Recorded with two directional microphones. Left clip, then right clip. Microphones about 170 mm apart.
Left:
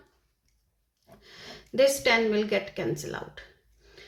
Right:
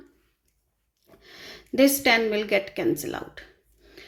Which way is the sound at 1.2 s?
30° right (ahead or behind).